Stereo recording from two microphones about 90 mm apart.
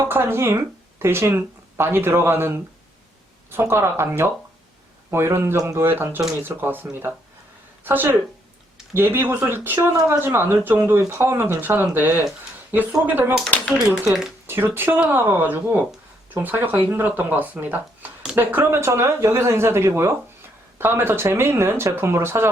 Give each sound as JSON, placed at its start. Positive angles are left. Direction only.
{"t": 0.1, "sound": "speech", "side_deg": -25}
{"t": 7.9, "sound": "speech", "side_deg": -25}
{"t": 13.7, "sound": "speech", "side_deg": -5}
{"t": 14.4, "sound": "speech", "side_deg": -25}